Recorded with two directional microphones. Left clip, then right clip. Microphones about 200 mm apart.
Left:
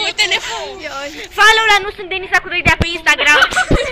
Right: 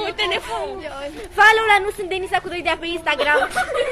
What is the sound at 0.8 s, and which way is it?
Speech, 25° left (ahead or behind).